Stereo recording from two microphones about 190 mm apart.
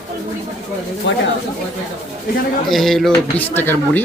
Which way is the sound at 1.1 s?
70° left (ahead or behind).